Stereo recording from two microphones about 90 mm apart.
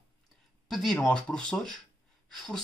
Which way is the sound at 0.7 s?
Centre (ahead or behind).